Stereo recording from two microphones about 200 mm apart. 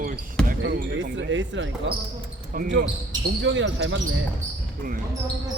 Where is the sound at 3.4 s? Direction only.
65° right (ahead or behind).